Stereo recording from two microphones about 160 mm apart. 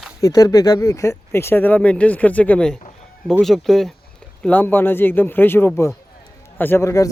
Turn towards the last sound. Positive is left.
turn(degrees=20)  # may be behind; listen again after turning